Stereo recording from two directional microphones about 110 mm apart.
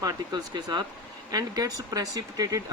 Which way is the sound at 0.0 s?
40° right (ahead or behind).